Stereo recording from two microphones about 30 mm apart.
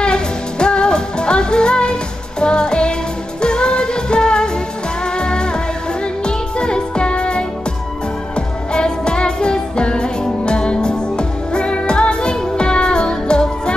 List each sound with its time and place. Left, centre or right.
0.0 s music: left